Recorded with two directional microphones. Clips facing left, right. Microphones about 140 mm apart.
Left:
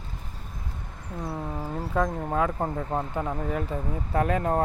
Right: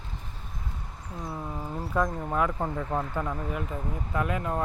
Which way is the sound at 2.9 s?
25° left (ahead or behind).